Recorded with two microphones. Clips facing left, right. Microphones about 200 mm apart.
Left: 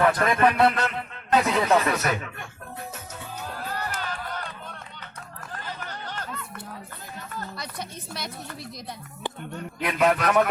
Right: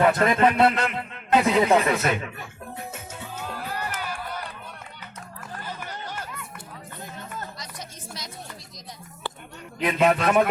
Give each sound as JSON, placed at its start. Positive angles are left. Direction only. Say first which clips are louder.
{"t": 0.0, "sound": "a man's voice", "louder": "right 1 dB", "side_deg": -25}
{"t": 3.7, "sound": "music", "louder": "left 1 dB", "side_deg": -10}
{"t": 5.5, "sound": "chatter", "louder": "right 1 dB", "side_deg": -10}
{"t": 7.5, "sound": "a sound", "louder": "left 4 dB", "side_deg": 60}
{"t": 9.8, "sound": "a man's voice", "louder": "right 2 dB", "side_deg": -25}